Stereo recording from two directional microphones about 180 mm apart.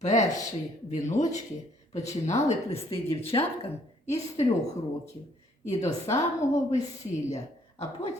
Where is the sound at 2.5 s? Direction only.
35° left (ahead or behind).